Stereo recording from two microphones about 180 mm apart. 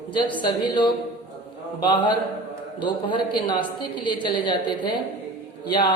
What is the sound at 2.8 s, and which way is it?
A woman's voice, 25° left (ahead or behind).